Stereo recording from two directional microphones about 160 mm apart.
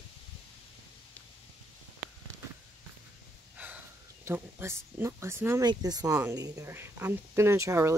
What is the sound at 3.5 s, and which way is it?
Speech, 10° right (ahead or behind).